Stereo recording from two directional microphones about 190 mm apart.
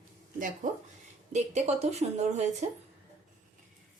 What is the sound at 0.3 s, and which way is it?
A woman's voice, 45° right (ahead or behind).